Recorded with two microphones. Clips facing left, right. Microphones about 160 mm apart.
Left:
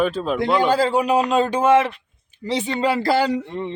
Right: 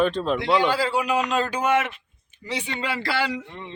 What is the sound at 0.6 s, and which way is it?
Speech, 45° left (ahead or behind).